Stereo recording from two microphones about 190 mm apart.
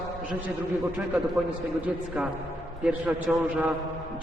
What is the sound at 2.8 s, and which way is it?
Speech, 5° right (ahead or behind).